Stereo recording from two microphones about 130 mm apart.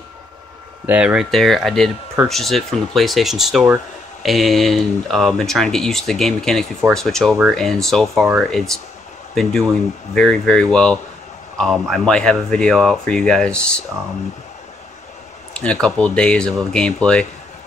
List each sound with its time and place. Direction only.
0.8 s speech: 10° right (ahead or behind); by 13.7 s 5° left (ahead or behind)
15.5 s speech: 10° left (ahead or behind)